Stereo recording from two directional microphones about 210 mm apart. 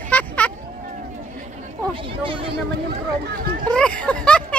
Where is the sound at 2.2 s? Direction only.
25° right (ahead or behind).